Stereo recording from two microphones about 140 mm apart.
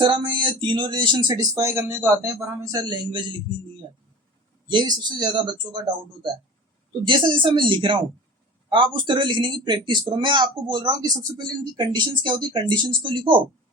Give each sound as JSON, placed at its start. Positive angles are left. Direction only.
{"t": 0.0, "sound": "speech", "side_deg": -35}
{"t": 2.7, "sound": "speech", "side_deg": -30}
{"t": 4.7, "sound": "speech", "side_deg": -35}
{"t": 7.0, "sound": "speech", "side_deg": -35}